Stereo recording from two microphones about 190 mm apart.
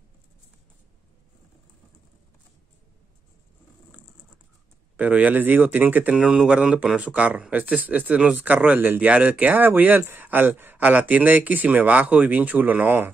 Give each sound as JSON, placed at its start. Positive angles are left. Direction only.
{"t": 4.9, "sound": "speech", "side_deg": -10}